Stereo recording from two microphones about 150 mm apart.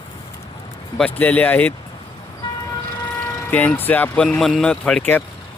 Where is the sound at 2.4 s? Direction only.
35° left (ahead or behind).